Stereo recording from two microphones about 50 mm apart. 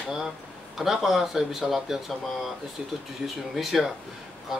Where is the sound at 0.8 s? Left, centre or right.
Centre.